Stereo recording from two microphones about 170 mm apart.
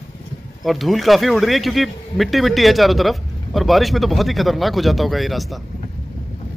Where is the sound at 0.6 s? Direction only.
Centre (ahead or behind).